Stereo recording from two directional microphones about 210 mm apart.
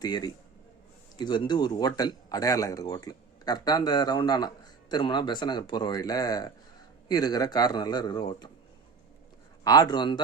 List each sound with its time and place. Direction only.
0.0 s speech: 20° left (ahead or behind)
9.6 s speech: 20° left (ahead or behind)